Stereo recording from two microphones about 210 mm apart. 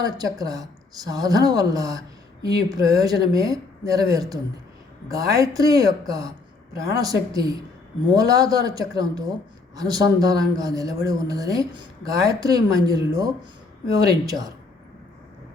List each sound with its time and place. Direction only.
0.0 s speech: 15° right (ahead or behind)